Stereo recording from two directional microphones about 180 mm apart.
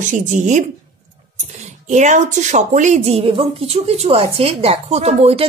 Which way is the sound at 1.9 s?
40° right (ahead or behind).